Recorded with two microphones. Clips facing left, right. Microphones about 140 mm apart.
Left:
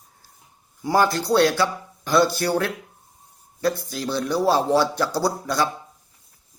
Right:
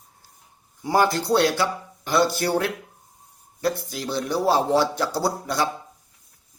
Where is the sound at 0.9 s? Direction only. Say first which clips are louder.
Even; 20° right (ahead or behind).